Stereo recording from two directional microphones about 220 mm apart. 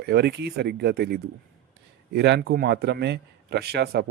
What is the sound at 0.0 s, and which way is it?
A man's voice, 50° right (ahead or behind).